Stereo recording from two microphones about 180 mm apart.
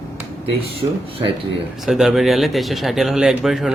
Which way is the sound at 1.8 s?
Centre (ahead or behind).